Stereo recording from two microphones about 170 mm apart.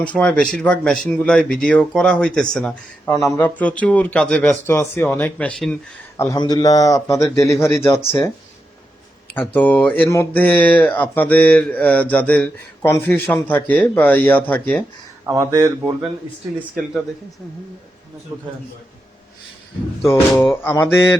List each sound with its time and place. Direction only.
0.0 s speech: 10° left (ahead or behind)
6.4 s speech: 20° left (ahead or behind)
9.3 s speech: 10° left (ahead or behind)
15.3 s speech: 15° right (ahead or behind)
16.6 s speech: 5° right (ahead or behind)
20.1 s speech: 15° left (ahead or behind)